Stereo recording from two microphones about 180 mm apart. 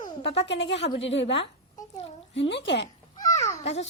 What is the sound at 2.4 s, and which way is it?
Speech, 75° left (ahead or behind).